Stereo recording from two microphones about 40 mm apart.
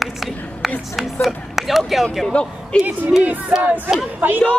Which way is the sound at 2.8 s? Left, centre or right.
Right.